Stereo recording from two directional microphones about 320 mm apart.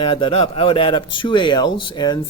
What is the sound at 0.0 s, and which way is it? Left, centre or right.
Speech, centre.